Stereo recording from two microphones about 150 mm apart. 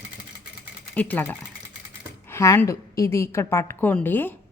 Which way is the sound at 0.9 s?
10° left (ahead or behind).